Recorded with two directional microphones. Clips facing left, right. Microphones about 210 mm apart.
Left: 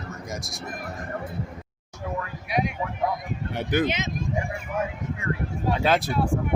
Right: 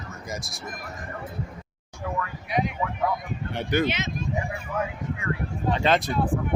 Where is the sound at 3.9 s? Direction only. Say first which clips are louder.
Left 1 dB; 20° left (ahead or behind).